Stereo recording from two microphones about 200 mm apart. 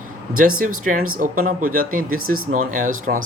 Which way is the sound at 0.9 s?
40° right (ahead or behind).